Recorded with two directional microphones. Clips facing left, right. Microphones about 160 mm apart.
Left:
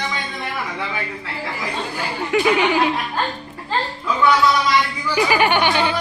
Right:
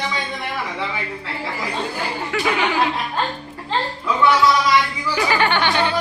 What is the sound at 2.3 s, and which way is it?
Speech, 15° left (ahead or behind).